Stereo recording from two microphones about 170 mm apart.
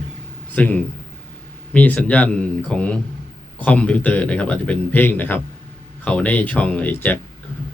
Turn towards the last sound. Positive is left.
turn(degrees=10)  # may be behind; listen again after turning